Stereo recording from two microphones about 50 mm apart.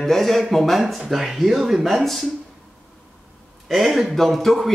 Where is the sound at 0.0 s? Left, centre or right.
Centre.